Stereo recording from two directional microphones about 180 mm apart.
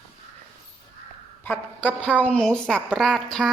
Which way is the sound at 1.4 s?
10° left (ahead or behind).